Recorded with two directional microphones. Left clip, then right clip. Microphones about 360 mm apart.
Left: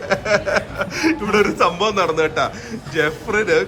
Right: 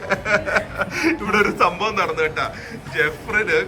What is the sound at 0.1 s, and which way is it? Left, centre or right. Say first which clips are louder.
A man's voice: left 2 dB; centre.